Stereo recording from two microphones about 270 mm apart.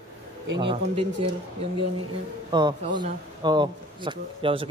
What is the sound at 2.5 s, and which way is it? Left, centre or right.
A man's voice, centre.